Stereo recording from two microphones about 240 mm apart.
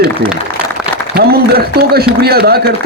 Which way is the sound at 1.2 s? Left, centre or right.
Right.